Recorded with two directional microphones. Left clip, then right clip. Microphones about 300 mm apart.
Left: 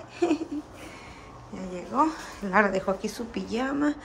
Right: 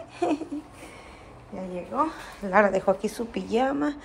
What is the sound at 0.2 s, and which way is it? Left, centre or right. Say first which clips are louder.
Speech: even; centre.